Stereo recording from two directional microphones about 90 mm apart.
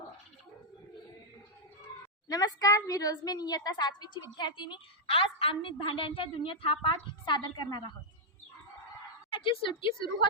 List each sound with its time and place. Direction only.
2.2 s a woman's voice: 45° left (ahead or behind); by 5.7 s 90° left
5.8 s a woman's voice: 75° left (ahead or behind); by 7.9 s 60° left (ahead or behind)
9.3 s a woman's voice: 85° left